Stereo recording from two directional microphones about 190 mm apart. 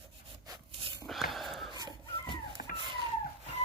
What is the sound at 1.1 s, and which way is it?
Snort, centre (ahead or behind).